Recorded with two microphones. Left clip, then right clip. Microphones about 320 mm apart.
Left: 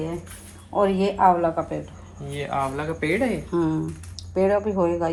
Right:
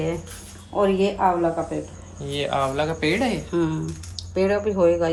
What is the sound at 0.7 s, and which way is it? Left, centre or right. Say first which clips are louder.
Speech: right 1 dB; centre.